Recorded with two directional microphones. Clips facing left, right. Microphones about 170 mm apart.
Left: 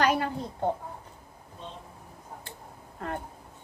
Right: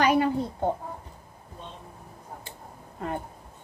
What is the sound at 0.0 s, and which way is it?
Speech, centre (ahead or behind).